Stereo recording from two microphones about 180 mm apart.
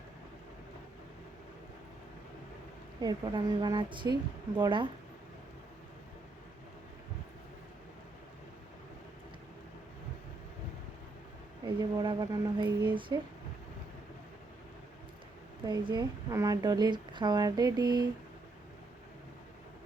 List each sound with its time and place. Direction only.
3.0 s a woman's voice: 25° right (ahead or behind)
11.6 s a woman's voice: 25° right (ahead or behind)
15.6 s a woman's voice: 25° right (ahead or behind)